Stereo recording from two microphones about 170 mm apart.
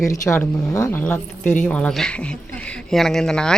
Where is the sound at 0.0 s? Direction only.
20° left (ahead or behind).